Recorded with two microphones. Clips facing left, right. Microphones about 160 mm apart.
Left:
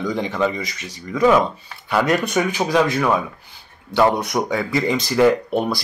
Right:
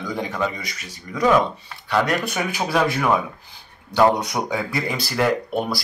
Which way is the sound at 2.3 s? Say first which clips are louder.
Left 4 dB; 10° right (ahead or behind).